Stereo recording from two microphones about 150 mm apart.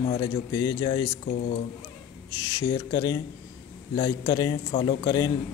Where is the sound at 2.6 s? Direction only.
25° left (ahead or behind).